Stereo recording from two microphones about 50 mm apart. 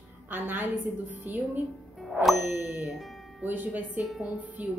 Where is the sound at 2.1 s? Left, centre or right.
Centre.